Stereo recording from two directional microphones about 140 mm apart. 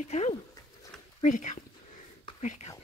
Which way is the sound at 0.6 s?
25° left (ahead or behind).